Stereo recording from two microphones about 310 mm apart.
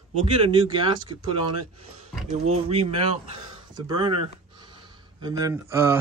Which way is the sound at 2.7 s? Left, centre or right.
Centre.